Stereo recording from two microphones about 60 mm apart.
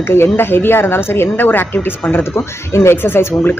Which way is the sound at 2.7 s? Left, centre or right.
Left.